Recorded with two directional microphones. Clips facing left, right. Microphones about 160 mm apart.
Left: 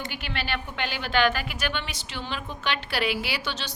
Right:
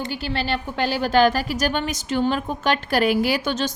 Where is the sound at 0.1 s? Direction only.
35° right (ahead or behind).